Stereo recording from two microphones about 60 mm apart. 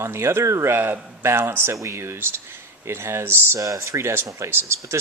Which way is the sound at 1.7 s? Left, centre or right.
Right.